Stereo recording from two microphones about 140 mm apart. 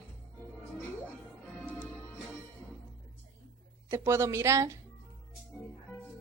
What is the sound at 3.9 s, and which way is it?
Speech, 20° right (ahead or behind).